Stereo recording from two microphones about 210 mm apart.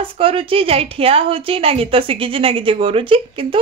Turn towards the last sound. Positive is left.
turn(degrees=-25)  # may be behind; listen again after turning